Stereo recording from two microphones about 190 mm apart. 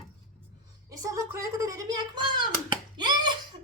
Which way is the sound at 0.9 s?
15° right (ahead or behind).